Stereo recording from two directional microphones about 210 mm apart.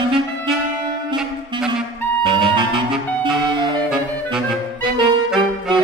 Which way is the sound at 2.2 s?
25° right (ahead or behind).